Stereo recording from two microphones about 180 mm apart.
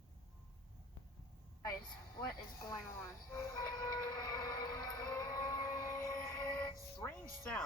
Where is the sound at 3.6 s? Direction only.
20° left (ahead or behind).